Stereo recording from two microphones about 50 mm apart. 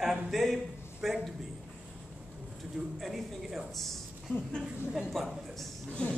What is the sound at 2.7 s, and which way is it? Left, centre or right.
Speech, centre.